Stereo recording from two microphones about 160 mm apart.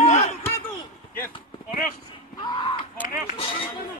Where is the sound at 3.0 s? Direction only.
60° left (ahead or behind).